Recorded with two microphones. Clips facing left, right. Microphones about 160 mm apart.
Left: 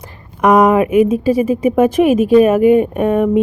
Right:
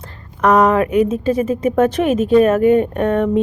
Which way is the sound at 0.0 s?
10° left (ahead or behind).